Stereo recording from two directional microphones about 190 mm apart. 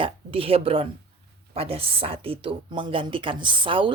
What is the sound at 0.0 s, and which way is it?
Speech, 30° right (ahead or behind).